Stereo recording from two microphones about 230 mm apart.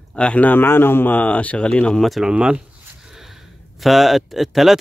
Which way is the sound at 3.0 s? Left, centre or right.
Centre.